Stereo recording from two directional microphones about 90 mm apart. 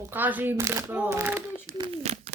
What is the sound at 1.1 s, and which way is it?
Speech, 25° right (ahead or behind).